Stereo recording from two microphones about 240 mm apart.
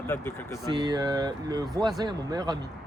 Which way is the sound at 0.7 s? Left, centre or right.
Centre.